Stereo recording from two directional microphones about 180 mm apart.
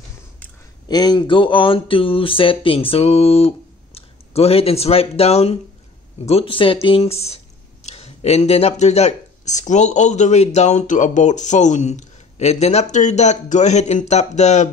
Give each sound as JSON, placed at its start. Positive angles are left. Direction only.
{"t": 0.8, "sound": "speech", "side_deg": 20}